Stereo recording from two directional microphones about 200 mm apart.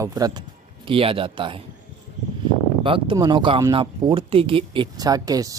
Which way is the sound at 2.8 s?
25° right (ahead or behind).